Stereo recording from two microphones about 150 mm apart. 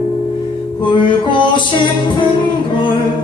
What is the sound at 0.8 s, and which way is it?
Music, 30° left (ahead or behind).